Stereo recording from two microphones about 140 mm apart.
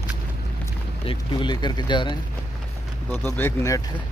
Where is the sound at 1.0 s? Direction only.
35° left (ahead or behind).